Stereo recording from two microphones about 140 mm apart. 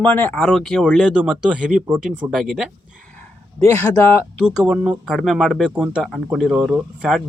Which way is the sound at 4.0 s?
15° left (ahead or behind).